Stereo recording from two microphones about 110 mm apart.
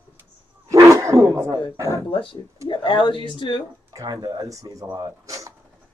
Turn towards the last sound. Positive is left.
turn(degrees=-30)  # may be behind; listen again after turning